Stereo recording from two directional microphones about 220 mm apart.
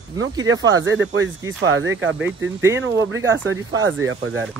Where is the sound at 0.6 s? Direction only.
60° right (ahead or behind).